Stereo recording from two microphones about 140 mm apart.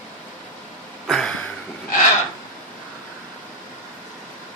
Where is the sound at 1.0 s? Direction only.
Centre (ahead or behind).